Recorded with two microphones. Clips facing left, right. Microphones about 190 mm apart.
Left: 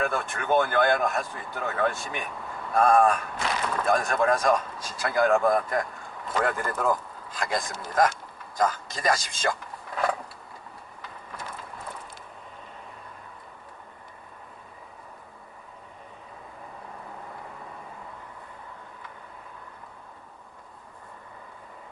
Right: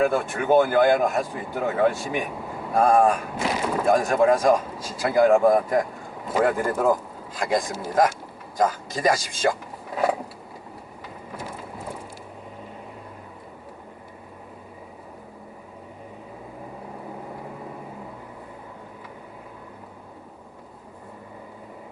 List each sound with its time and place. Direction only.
0.0 s speech: 10° right (ahead or behind)
11.0 s rain: 10° right (ahead or behind)
17.2 s vehicle: 15° right (ahead or behind)